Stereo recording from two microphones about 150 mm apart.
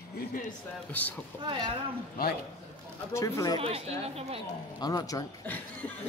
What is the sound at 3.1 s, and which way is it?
Speech, 20° left (ahead or behind).